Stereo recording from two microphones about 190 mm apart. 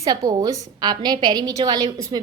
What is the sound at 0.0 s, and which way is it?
A woman's voice, 20° right (ahead or behind).